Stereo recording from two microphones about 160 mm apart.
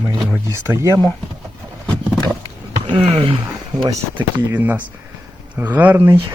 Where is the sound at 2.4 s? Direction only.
30° right (ahead or behind).